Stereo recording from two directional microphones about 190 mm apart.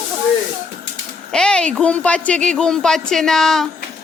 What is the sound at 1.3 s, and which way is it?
Speech, 5° left (ahead or behind).